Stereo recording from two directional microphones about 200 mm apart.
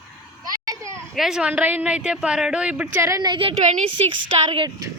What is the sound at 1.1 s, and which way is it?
A woman's voice, centre (ahead or behind).